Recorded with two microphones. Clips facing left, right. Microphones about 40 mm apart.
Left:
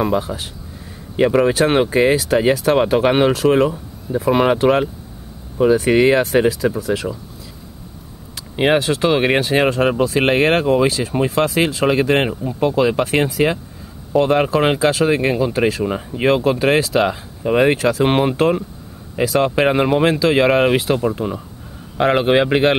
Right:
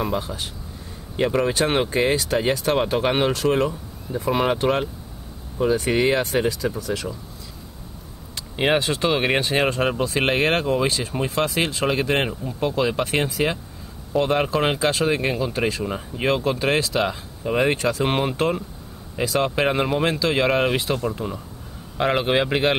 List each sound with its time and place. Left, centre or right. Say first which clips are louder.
0.0 s speech: left 6 dB; centre
8.5 s speech: left 5 dB; centre
16.3 s speech: left 6 dB; centre